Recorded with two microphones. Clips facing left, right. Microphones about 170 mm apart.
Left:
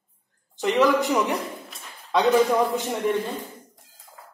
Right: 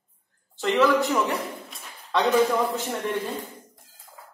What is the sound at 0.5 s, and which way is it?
Speech, 15° left (ahead or behind).